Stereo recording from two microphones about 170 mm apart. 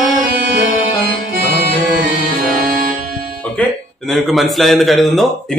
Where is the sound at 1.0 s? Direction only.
60° right (ahead or behind).